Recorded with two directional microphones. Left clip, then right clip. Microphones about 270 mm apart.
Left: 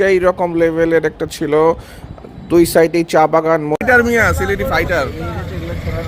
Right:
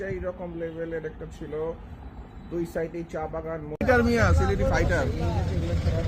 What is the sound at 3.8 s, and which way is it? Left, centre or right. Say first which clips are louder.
Speech: left 8 dB; centre.